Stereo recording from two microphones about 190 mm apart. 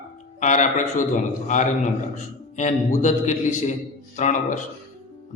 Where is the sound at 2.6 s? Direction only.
40° left (ahead or behind).